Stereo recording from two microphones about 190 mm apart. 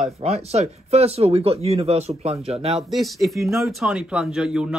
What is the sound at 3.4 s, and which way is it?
Speech, 15° right (ahead or behind).